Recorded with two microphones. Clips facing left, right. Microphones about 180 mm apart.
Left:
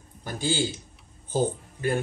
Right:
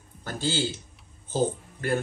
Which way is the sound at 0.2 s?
15° left (ahead or behind).